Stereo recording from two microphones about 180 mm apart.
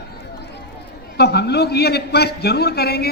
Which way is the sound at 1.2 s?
65° left (ahead or behind).